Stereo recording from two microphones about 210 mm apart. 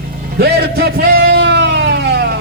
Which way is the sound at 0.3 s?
50° right (ahead or behind).